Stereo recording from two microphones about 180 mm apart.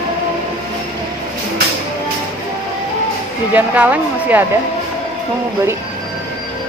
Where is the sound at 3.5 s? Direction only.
10° right (ahead or behind).